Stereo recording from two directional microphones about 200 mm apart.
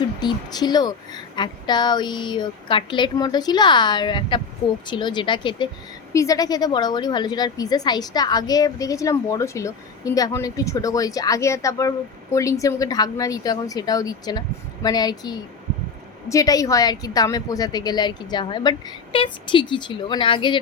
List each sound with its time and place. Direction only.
0.2 s a woman's voice: 20° left (ahead or behind)